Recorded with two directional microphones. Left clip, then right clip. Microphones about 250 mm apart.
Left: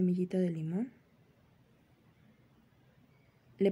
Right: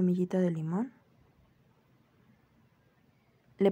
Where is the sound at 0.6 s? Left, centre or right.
Right.